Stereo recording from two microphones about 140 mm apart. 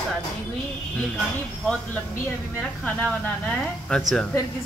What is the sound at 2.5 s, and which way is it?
A woman's voice, 10° left (ahead or behind).